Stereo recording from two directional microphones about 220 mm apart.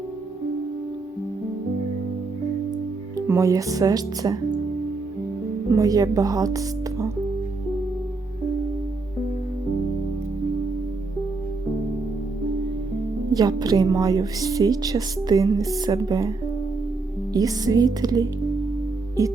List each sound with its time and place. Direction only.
3.2 s a woman's voice: 15° right (ahead or behind)
5.7 s speech: 15° right (ahead or behind)
13.3 s a woman's voice: 15° right (ahead or behind)
17.3 s a woman's voice: 15° right (ahead or behind)